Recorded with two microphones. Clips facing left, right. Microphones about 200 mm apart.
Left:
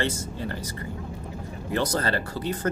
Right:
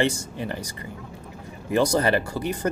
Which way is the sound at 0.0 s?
15° right (ahead or behind).